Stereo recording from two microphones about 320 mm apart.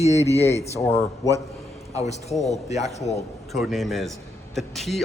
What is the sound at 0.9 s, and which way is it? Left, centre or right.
Speech, centre.